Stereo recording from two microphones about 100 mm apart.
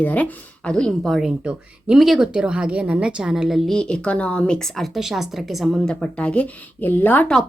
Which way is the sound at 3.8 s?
10° left (ahead or behind).